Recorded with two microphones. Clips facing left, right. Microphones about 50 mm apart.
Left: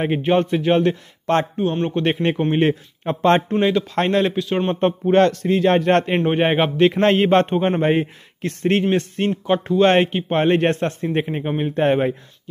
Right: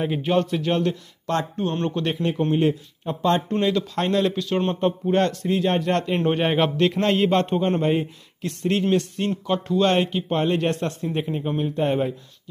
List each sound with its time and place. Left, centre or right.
0.0 s a man's voice: left
1.6 s speech: centre
2.5 s a man's voice: left
3.5 s a man's voice: left
3.9 s a man's voice: left
4.4 s a man's voice: left
4.7 s a man's voice: left
5.1 s a man's voice: left
5.8 s a man's voice: left
6.2 s a man's voice: left
7.0 s a man's voice: left